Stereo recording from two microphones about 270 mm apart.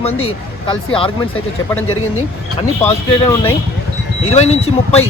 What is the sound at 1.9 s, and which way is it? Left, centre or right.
Speech, left.